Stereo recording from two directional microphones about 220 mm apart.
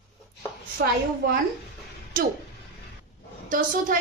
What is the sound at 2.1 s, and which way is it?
Speech, 40° right (ahead or behind).